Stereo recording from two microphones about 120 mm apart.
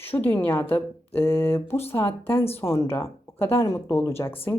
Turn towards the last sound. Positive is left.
turn(degrees=20)  # may be behind; listen again after turning